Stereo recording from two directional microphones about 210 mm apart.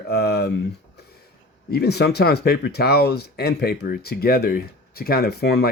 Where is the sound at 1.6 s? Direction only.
50° left (ahead or behind).